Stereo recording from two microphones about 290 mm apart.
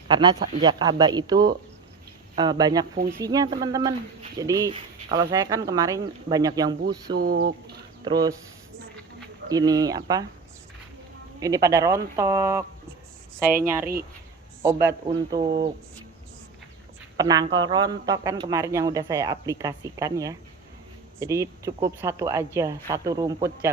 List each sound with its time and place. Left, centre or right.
0.1 s speech: centre
7.2 s speech: right
8.0 s speech: centre
9.5 s speech: centre
11.3 s speech: centre
17.2 s speech: centre